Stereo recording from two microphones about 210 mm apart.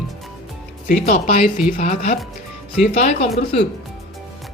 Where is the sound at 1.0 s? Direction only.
35° left (ahead or behind).